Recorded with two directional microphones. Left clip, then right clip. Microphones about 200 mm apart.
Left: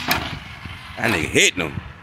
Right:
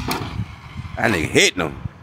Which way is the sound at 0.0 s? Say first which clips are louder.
Left 4 dB; 5° left (ahead or behind).